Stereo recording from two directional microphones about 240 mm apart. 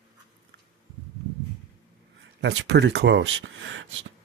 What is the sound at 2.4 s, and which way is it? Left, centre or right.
Speech, right.